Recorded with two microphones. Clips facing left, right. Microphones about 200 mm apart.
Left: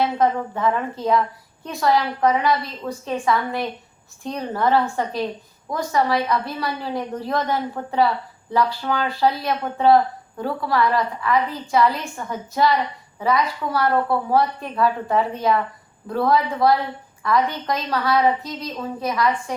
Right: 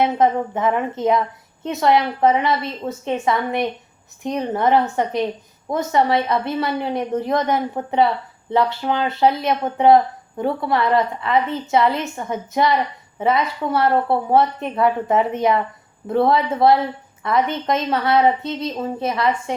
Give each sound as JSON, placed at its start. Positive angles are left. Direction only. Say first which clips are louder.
{"t": 0.0, "sound": "a woman's voice", "louder": "right 3 dB", "side_deg": -20}